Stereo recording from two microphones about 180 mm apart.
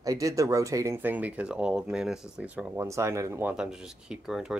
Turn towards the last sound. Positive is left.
turn(degrees=-5)  # may be behind; listen again after turning